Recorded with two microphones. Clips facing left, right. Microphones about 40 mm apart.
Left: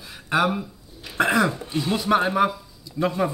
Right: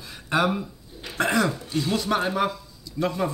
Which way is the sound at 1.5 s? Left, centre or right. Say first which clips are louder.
Left 1 dB; left.